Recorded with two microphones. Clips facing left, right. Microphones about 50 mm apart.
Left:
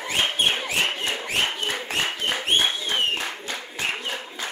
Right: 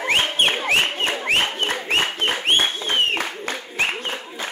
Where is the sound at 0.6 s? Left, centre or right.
Right.